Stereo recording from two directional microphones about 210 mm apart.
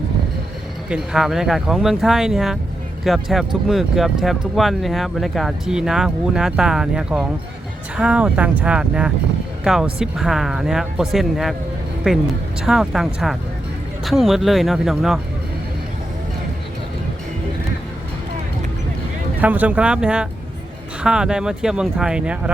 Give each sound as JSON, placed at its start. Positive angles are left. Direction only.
{"t": 0.9, "sound": "speech", "side_deg": -5}
{"t": 19.4, "sound": "speech", "side_deg": -5}